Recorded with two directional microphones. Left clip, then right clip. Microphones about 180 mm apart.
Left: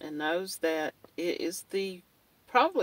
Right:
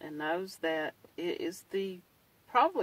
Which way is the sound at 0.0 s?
25° left (ahead or behind).